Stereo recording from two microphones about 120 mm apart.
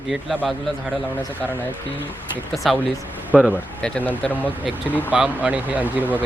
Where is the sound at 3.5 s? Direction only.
10° left (ahead or behind).